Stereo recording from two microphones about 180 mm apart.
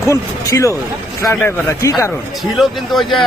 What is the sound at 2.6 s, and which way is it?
Speech, centre (ahead or behind).